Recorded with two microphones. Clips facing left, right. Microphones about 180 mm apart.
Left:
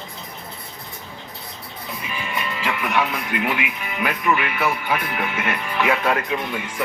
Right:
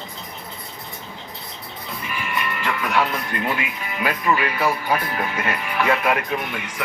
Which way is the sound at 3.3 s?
15° left (ahead or behind).